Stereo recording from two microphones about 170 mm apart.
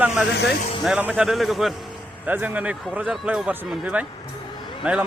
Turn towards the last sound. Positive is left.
turn(degrees=-5)  # may be behind; listen again after turning